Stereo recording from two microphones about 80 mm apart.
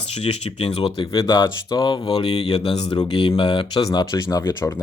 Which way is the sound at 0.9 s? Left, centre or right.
Left.